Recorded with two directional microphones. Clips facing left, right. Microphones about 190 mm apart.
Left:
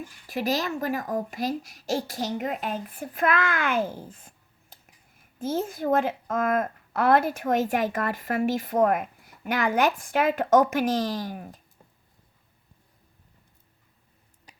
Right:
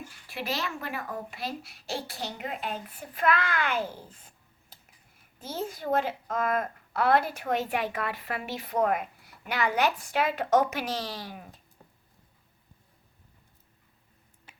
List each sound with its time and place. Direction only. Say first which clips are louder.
0.3 s a child's voice: left 7 dB; 40° left (ahead or behind)
14.5 s tick-tock: left 2 dB; 35° left (ahead or behind)